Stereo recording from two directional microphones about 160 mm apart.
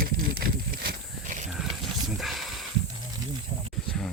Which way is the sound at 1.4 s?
Centre (ahead or behind).